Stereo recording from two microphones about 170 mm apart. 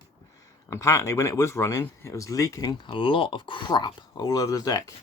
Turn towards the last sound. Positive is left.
turn(degrees=20)  # may be behind; listen again after turning